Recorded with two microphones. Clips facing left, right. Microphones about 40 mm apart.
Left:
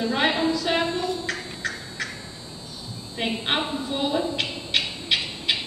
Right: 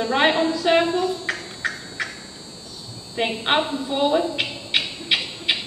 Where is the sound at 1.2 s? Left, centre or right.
Centre.